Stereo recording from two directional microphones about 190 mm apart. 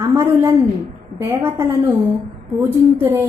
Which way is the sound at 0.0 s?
15° right (ahead or behind).